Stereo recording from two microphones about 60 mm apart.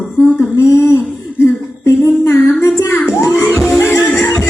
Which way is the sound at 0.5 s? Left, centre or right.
Left.